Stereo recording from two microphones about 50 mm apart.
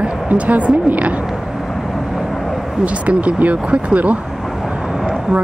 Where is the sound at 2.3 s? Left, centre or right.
Centre.